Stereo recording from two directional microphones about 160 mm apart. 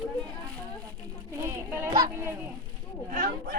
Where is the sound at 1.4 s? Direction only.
15° right (ahead or behind).